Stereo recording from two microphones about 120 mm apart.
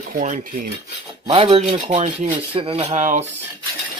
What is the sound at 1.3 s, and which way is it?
Speech, 50° right (ahead or behind).